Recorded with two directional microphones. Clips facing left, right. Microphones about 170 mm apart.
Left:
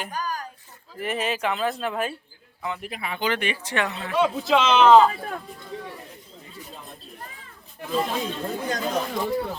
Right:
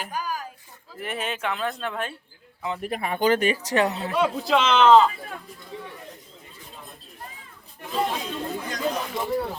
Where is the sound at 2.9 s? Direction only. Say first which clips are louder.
Right 7 dB; 45° right (ahead or behind).